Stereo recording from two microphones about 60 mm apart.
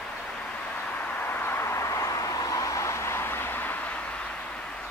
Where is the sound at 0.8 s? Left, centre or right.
Left.